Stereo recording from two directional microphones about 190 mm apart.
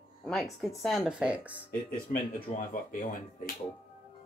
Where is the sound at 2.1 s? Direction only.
45° left (ahead or behind).